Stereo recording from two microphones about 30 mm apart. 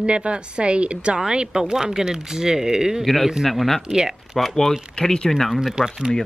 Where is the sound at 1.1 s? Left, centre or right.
Right.